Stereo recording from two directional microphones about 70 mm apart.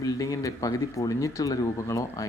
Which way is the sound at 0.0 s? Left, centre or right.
Left.